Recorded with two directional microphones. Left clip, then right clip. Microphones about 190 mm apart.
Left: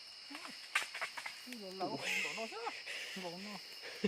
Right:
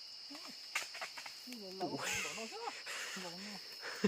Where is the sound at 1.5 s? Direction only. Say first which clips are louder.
Right 1 dB; centre (ahead or behind).